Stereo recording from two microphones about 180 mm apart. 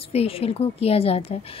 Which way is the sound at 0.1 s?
35° left (ahead or behind).